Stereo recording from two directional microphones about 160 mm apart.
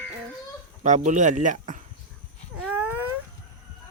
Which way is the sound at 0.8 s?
50° right (ahead or behind).